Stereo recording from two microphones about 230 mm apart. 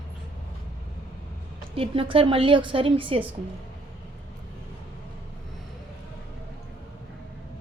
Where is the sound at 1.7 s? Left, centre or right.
Right.